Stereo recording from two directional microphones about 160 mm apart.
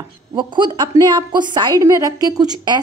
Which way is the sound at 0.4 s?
30° right (ahead or behind).